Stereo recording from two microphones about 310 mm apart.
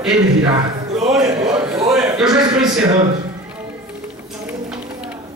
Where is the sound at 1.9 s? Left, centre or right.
Centre.